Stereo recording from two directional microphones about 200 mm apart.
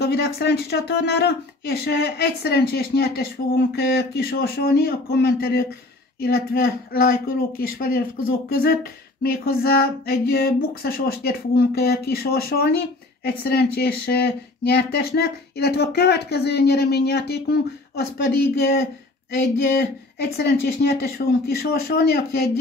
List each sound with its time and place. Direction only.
0.0 s speech: 50° left (ahead or behind)